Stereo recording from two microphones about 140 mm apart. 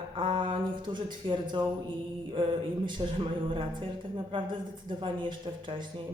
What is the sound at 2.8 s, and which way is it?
Speech, 35° right (ahead or behind).